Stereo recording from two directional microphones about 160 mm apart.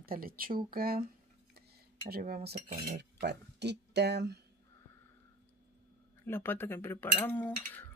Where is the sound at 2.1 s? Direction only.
75° right (ahead or behind).